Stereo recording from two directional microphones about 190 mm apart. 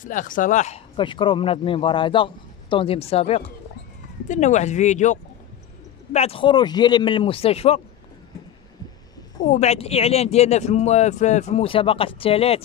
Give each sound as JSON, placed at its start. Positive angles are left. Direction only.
{"t": 0.0, "sound": "speech", "side_deg": 45}
{"t": 9.4, "sound": "speech", "side_deg": 40}